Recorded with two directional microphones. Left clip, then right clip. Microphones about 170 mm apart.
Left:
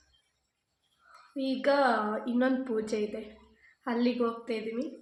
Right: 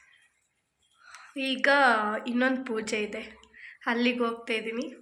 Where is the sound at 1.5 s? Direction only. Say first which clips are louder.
Right 4 dB; 5° left (ahead or behind).